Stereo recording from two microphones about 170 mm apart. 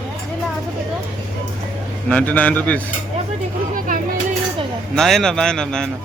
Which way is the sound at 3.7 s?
55° right (ahead or behind).